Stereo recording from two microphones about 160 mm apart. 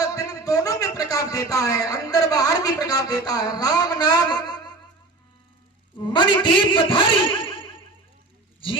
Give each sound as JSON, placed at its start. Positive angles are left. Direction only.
{"t": 0.0, "sound": "a man's voice", "side_deg": 20}
{"t": 6.1, "sound": "a man's voice", "side_deg": 30}